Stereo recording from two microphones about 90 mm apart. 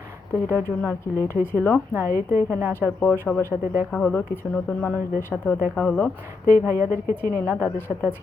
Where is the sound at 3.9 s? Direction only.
15° left (ahead or behind).